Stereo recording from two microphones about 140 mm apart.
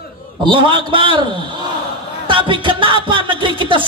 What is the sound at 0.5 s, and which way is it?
Speech, 35° right (ahead or behind).